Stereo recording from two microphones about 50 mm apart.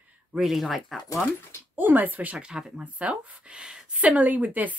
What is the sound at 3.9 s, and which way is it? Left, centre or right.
Speech, right.